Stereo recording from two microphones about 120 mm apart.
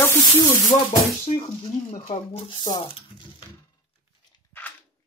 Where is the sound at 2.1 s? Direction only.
55° left (ahead or behind).